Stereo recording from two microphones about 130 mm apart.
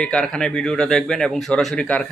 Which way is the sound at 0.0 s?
5° left (ahead or behind).